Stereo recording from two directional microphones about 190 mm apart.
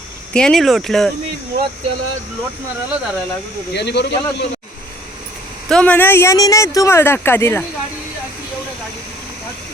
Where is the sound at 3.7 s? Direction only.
65° left (ahead or behind).